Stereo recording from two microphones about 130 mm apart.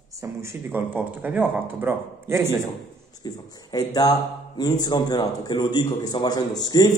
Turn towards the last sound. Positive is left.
turn(degrees=30)  # may be behind; listen again after turning